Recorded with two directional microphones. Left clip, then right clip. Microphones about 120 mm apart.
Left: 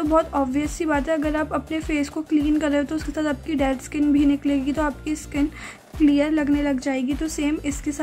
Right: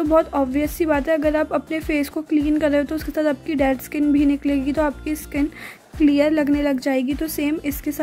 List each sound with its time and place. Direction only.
0.1 s a woman's voice: 30° right (ahead or behind)